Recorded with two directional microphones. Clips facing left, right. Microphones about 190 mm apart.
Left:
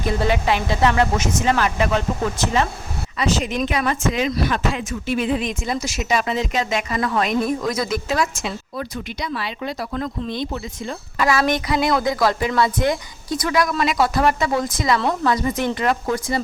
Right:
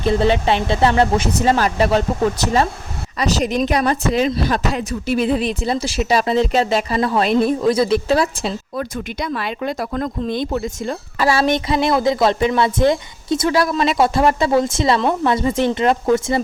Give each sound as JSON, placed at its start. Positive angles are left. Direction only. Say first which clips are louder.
{"t": 0.0, "sound": "speech", "louder": "right 4 dB", "side_deg": -30}
{"t": 8.8, "sound": "speech", "louder": "right 3 dB", "side_deg": -50}
{"t": 11.2, "sound": "speech", "louder": "right 2 dB", "side_deg": -30}